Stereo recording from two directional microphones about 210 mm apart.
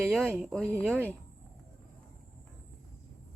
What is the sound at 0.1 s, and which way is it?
Speech, 5° right (ahead or behind).